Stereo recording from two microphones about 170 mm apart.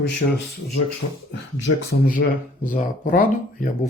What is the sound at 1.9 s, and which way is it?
Speech, 60° left (ahead or behind).